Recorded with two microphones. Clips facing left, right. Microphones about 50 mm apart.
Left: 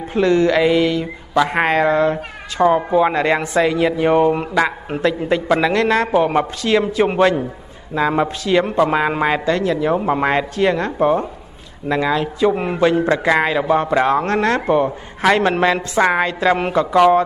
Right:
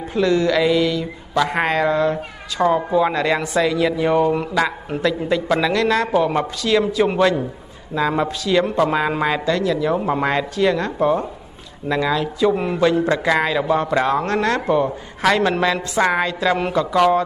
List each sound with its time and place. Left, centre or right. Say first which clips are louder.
0.1 s a man's voice: left 3 dB; left